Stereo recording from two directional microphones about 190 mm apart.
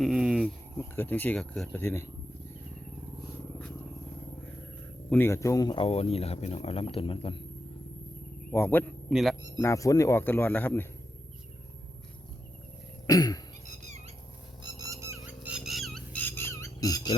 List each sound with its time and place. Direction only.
0.0 s speech: 5° right (ahead or behind)
5.0 s speech: 10° left (ahead or behind); by 7.3 s 30° left (ahead or behind)
8.5 s speech: 10° left (ahead or behind)
9.0 s speech: centre (ahead or behind)
9.6 s speech: 15° left (ahead or behind)
13.1 s cough: 20° left (ahead or behind)
14.8 s a sound: 15° right (ahead or behind)
15.5 s squawk: centre (ahead or behind); by 17.2 s 20° left (ahead or behind)